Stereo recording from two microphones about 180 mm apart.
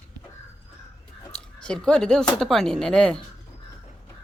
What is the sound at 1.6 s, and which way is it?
Speech, 5° left (ahead or behind).